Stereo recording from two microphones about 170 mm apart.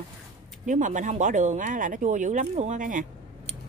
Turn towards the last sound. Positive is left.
turn(degrees=-50)  # may be behind; listen again after turning